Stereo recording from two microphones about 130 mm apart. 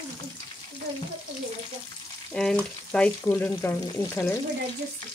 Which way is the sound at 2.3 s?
5° left (ahead or behind).